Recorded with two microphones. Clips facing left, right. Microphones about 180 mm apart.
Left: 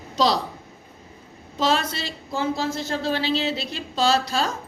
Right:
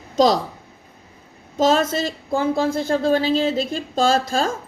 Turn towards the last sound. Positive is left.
turn(degrees=-45)  # may be behind; listen again after turning